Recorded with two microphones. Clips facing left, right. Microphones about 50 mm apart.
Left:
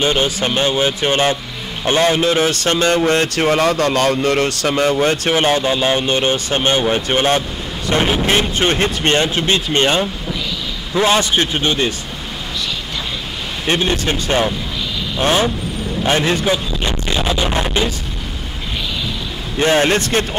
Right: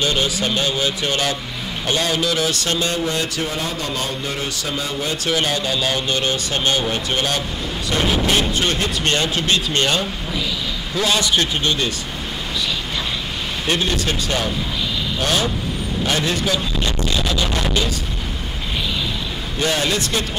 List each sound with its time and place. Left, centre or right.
0.0 s speech: left
5.1 s speech: left
13.7 s speech: left
19.6 s speech: left